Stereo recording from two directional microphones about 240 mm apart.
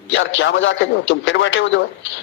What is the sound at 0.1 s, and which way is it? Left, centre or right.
A man's voice, left.